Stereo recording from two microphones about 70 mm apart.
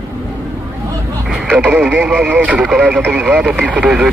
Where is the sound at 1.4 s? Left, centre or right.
Centre.